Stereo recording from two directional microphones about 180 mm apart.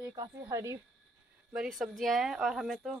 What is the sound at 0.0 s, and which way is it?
Speech, 20° right (ahead or behind).